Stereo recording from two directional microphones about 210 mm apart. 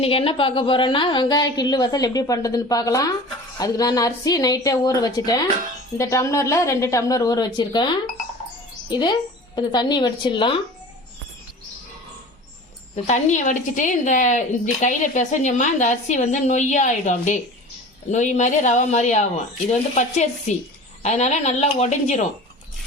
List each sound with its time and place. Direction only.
0.0 s a woman's voice: 25° left (ahead or behind)
13.1 s a woman's voice: 35° left (ahead or behind)